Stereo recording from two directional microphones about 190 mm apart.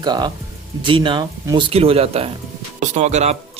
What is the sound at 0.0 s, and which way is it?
A man's voice, 20° right (ahead or behind).